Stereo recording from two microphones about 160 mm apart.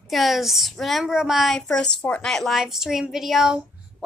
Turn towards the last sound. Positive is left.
turn(degrees=0)  # may be behind; listen again after turning